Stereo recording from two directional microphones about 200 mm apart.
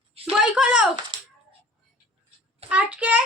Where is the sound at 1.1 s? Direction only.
25° right (ahead or behind).